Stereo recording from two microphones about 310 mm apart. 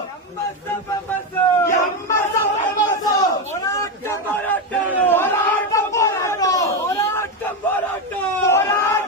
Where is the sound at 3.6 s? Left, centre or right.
Centre.